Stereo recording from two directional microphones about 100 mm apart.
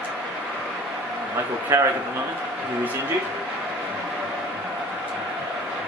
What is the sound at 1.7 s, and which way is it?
Speech, 20° right (ahead or behind).